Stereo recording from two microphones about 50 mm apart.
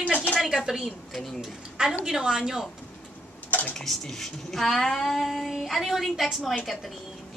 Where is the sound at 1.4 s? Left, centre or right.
Centre.